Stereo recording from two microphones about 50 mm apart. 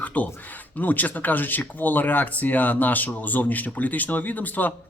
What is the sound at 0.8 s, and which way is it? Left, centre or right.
Speech, left.